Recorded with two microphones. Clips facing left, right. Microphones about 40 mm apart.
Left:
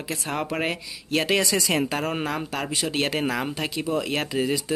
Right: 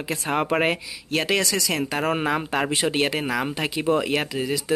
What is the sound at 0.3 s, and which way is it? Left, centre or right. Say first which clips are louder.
Speech: right 6 dB; right.